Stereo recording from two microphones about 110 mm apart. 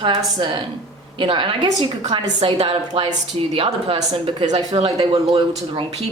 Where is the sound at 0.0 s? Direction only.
50° right (ahead or behind).